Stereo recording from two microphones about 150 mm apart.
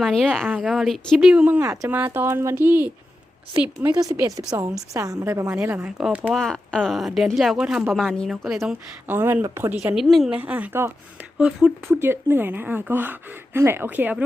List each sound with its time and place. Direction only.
0.0 s speech: centre (ahead or behind)
0.4 s speech: 5° right (ahead or behind)
3.8 s a woman's voice: 30° right (ahead or behind); by 8.7 s centre (ahead or behind)
9.0 s speech: 15° right (ahead or behind)
9.7 s speech: 5° right (ahead or behind)